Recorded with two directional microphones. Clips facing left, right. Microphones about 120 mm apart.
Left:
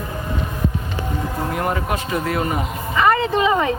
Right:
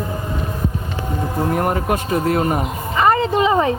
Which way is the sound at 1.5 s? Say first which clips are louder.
Right 2 dB; 45° right (ahead or behind).